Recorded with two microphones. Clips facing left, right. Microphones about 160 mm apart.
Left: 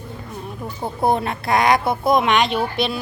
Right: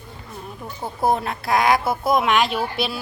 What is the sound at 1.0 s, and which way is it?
A woman's voice, centre (ahead or behind).